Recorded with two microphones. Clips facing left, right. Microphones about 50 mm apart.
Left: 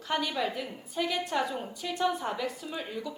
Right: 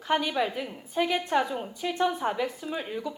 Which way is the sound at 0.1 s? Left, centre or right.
Centre.